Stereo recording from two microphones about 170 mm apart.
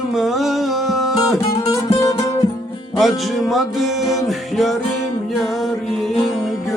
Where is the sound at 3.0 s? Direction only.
Centre (ahead or behind).